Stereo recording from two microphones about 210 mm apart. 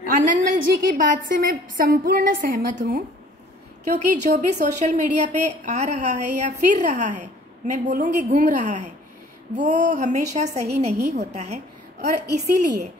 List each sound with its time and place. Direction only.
0.0 s a woman's voice: 40° right (ahead or behind)
11.0 s a woman's voice: 50° right (ahead or behind)
11.3 s a woman's voice: 35° right (ahead or behind)